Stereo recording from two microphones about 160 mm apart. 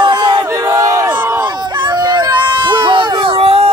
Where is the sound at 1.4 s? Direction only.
25° right (ahead or behind).